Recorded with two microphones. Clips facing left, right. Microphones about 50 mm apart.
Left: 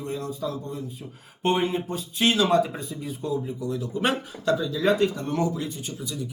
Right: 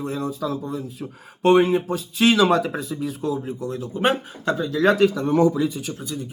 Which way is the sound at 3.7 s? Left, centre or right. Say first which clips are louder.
Right 4 dB; right.